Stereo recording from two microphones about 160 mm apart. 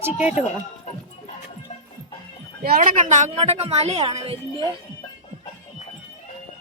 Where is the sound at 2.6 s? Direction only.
65° right (ahead or behind); by 4.4 s 40° right (ahead or behind).